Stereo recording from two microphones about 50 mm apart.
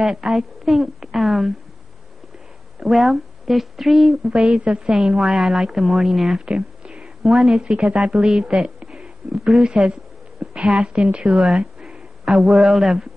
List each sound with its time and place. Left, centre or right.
0.0 s a woman's voice: centre
2.8 s a woman's voice: centre
4.5 s a woman's voice: centre
6.4 s a sound: centre
7.5 s a woman's voice: right
10.4 s a sound: right
10.7 s a woman's voice: right
11.4 s a sound: centre
12.3 s a woman's voice: centre